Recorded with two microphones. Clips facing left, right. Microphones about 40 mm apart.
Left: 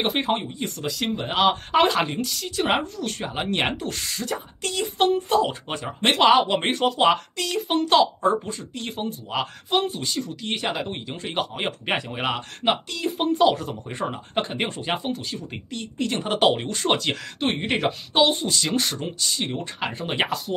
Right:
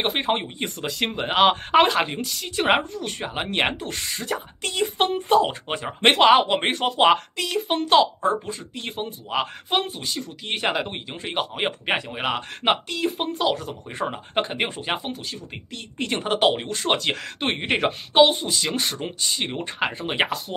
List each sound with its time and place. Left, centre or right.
0.0 s speech: centre
0.4 s speech: right
1.8 s speech: centre
4.6 s speech: right; by 10.5 s centre
10.5 s speech: right; by 12.4 s centre
12.4 s speech: right
13.2 s speech: centre
17.6 s speech: right
19.0 s speech: right
19.9 s speech: centre